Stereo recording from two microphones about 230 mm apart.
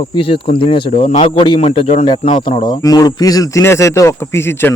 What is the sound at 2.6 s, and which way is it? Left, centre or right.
Speech, centre.